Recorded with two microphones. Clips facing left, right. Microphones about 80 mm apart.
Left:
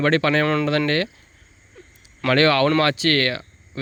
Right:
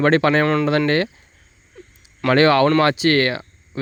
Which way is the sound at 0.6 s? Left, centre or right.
Right.